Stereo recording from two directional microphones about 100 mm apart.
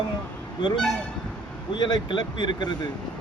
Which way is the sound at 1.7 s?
50° left (ahead or behind).